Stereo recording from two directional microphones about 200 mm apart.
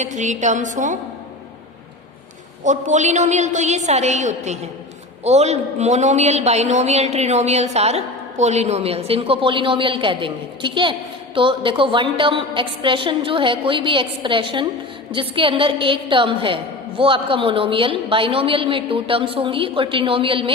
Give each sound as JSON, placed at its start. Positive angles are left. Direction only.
{"t": 0.0, "sound": "a man's voice", "side_deg": -35}
{"t": 2.6, "sound": "a man's voice", "side_deg": -35}